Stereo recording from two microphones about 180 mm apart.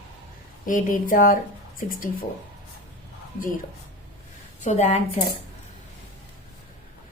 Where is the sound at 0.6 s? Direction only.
50° left (ahead or behind).